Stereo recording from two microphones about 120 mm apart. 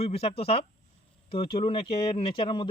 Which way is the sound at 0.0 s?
55° left (ahead or behind).